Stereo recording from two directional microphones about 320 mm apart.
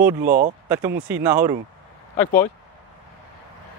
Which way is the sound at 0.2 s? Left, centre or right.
Right.